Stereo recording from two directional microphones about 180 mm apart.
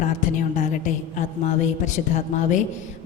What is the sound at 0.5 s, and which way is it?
A woman's voice, 45° left (ahead or behind).